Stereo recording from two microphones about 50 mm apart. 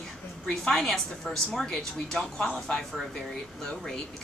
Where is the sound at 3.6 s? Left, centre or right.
Centre.